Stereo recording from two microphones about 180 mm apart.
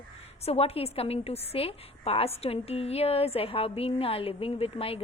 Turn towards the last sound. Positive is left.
turn(degrees=30)  # may be behind; listen again after turning